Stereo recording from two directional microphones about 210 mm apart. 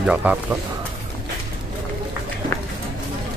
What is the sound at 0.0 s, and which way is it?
Speech, 5° right (ahead or behind).